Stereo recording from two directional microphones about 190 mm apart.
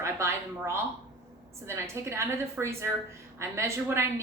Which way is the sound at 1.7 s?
15° right (ahead or behind).